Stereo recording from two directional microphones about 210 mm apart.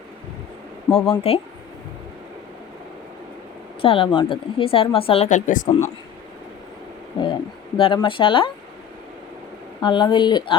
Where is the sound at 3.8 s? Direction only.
25° left (ahead or behind).